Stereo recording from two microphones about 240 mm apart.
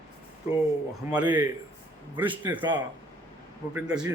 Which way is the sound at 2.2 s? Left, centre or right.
Centre.